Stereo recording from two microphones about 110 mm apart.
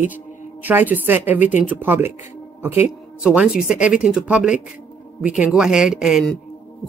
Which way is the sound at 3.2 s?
10° right (ahead or behind).